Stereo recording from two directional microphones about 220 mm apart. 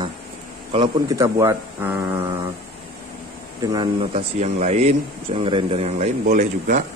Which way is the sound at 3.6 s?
20° right (ahead or behind).